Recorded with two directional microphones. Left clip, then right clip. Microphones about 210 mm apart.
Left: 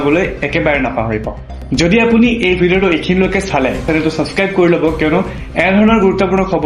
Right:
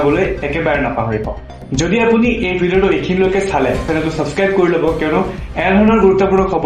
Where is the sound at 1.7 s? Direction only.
45° left (ahead or behind).